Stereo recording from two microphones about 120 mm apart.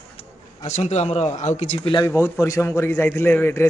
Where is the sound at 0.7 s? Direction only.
70° left (ahead or behind).